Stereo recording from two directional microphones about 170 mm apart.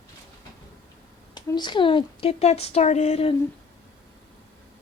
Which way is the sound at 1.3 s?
25° left (ahead or behind).